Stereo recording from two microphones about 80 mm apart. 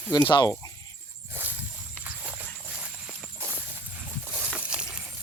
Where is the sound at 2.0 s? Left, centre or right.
Centre.